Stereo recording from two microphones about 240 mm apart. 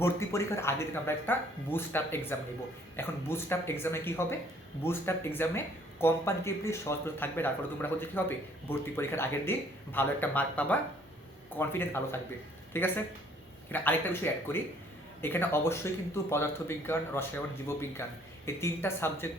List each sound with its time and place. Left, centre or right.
0.0 s speech: centre